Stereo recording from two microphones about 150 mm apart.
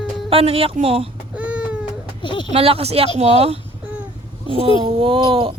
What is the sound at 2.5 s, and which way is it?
Speech, 40° right (ahead or behind).